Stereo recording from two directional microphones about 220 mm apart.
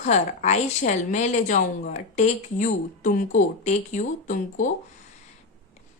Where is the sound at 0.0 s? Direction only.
30° left (ahead or behind).